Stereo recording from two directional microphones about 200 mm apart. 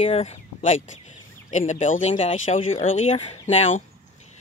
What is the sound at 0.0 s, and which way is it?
Speech, 30° left (ahead or behind).